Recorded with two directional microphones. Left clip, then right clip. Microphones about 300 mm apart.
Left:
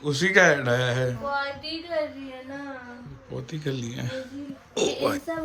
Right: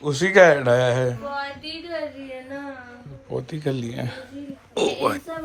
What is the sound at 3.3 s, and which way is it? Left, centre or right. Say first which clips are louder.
A child's voice: right 6 dB; centre.